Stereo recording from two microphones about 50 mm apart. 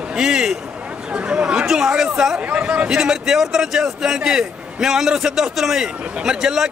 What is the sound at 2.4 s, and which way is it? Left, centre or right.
Speech, right.